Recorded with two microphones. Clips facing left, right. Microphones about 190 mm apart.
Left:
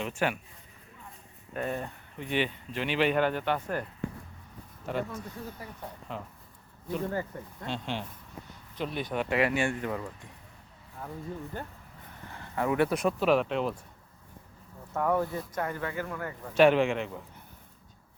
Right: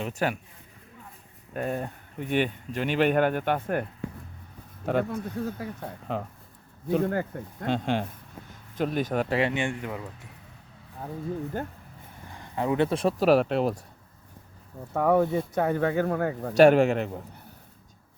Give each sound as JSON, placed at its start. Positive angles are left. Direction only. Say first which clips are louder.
{"t": 0.0, "sound": "speech", "louder": "right 2 dB", "side_deg": -40}
{"t": 1.5, "sound": "speech", "louder": "right 3 dB", "side_deg": -45}
{"t": 4.9, "sound": "speech", "louder": "right 7 dB", "side_deg": -55}
{"t": 9.4, "sound": "speech", "louder": "even", "side_deg": -20}
{"t": 12.3, "sound": "speech", "louder": "right 2 dB", "side_deg": -20}
{"t": 14.9, "sound": "speech", "louder": "right 6 dB", "side_deg": -70}
{"t": 15.3, "sound": "speech", "louder": "right 8 dB", "side_deg": -30}
{"t": 15.8, "sound": "speech", "louder": "right 10 dB", "side_deg": -70}
{"t": 16.5, "sound": "speech", "louder": "right 4 dB", "side_deg": -45}